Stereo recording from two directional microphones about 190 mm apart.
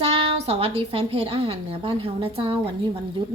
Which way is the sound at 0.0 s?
30° right (ahead or behind).